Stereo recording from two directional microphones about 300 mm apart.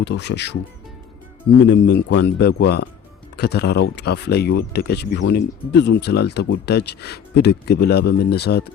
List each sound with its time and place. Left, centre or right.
0.0 s speech: left
1.6 s speech: left